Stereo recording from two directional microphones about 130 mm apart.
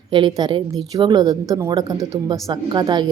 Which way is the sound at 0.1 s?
35° right (ahead or behind).